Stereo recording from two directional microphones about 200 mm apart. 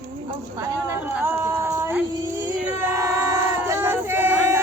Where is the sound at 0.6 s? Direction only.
15° right (ahead or behind).